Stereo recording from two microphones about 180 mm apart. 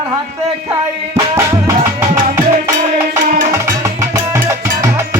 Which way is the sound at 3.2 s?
45° right (ahead or behind).